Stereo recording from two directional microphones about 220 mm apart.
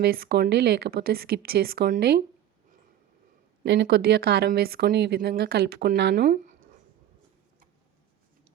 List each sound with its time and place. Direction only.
0.0 s a woman's voice: 45° right (ahead or behind)
3.7 s a woman's voice: 50° right (ahead or behind)